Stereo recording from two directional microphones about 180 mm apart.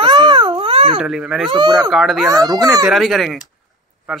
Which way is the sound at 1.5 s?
25° right (ahead or behind).